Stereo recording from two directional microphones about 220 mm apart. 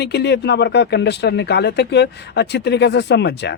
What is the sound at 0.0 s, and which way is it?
Speech, 50° left (ahead or behind).